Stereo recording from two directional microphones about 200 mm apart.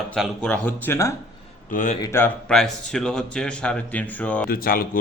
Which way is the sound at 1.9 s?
15° left (ahead or behind).